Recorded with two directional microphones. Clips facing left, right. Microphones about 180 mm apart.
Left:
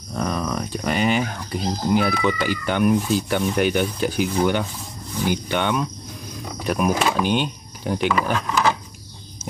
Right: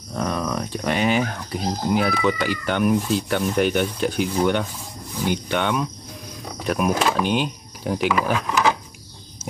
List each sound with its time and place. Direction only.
0.1 s speech: centre (ahead or behind)